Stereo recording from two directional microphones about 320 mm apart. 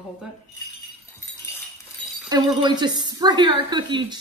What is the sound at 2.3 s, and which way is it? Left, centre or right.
A woman's voice, centre.